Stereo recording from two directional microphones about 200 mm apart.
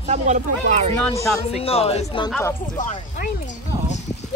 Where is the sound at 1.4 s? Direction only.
30° left (ahead or behind).